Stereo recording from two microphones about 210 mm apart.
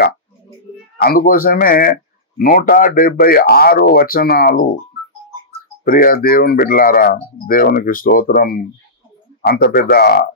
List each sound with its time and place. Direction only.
1.0 s speech: 45° left (ahead or behind)
5.9 s speech: 45° left (ahead or behind)